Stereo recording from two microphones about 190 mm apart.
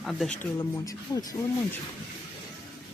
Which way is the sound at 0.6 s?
20° left (ahead or behind).